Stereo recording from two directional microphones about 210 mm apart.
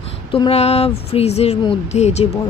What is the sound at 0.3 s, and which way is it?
Speech, 25° left (ahead or behind).